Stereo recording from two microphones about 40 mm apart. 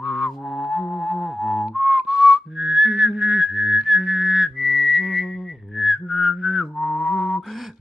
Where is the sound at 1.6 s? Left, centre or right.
Right; by 6.6 s centre.